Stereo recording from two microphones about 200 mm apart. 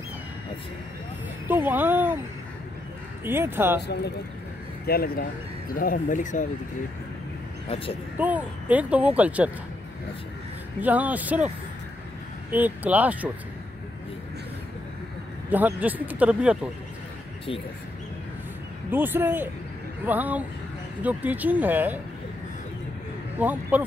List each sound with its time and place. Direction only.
1.5 s speech: 10° right (ahead or behind)
3.3 s speech: 10° right (ahead or behind)
3.8 s speech: 55° left (ahead or behind)
7.6 s speech: 30° left (ahead or behind)
8.2 s speech: 10° right (ahead or behind)
10.8 s speech: 10° right (ahead or behind)
15.5 s speech: 10° right (ahead or behind)
18.9 s speech: 10° right (ahead or behind)
23.4 s speech: 10° right (ahead or behind)